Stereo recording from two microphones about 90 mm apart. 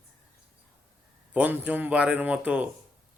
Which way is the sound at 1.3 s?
15° right (ahead or behind).